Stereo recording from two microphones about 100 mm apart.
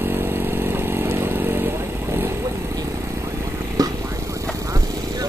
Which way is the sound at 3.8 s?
40° right (ahead or behind).